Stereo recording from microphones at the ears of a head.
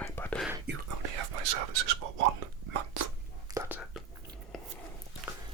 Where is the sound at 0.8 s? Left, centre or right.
Right.